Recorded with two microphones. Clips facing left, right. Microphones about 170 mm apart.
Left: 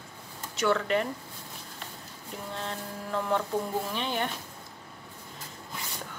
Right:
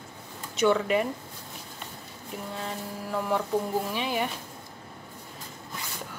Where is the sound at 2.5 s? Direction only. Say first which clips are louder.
Even; 5° right (ahead or behind).